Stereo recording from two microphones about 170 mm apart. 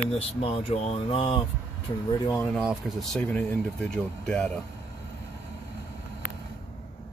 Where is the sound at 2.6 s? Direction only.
Centre (ahead or behind).